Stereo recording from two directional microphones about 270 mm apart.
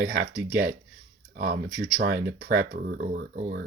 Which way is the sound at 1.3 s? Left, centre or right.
Right.